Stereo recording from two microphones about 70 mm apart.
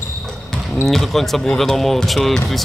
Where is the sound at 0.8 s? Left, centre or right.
Centre.